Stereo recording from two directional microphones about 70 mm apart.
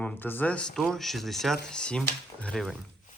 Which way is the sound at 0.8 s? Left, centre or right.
Centre.